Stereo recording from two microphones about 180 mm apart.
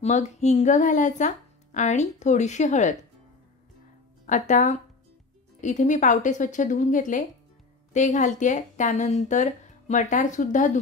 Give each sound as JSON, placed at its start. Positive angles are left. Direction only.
{"t": 0.0, "sound": "speech", "side_deg": 40}
{"t": 4.3, "sound": "speech", "side_deg": 45}